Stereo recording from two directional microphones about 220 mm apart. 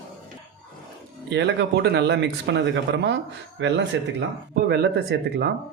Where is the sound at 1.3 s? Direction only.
50° right (ahead or behind).